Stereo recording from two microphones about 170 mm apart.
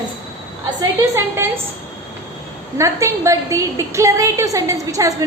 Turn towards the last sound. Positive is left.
turn(degrees=-20)  # may be behind; listen again after turning